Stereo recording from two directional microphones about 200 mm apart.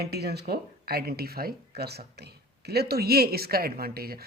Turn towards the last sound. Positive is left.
turn(degrees=-50)  # may be behind; listen again after turning